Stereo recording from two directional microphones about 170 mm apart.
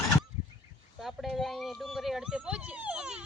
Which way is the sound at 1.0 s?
Centre (ahead or behind).